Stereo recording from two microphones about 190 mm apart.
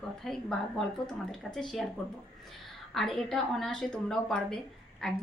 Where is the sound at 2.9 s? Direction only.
Centre (ahead or behind).